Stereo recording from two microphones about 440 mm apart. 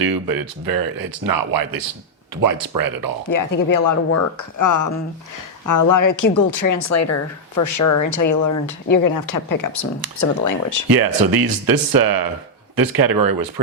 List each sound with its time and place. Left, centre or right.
0.0 s speech: right
3.3 s speech: left
10.8 s speech: right